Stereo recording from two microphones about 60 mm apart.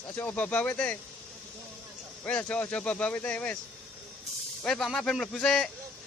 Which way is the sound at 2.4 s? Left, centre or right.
Left.